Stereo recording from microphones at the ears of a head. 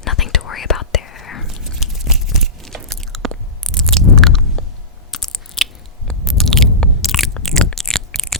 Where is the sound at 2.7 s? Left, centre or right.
Right.